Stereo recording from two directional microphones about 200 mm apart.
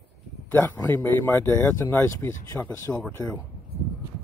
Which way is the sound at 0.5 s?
10° left (ahead or behind).